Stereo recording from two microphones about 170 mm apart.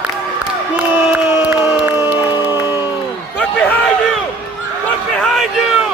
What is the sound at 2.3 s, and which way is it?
Music, 25° left (ahead or behind).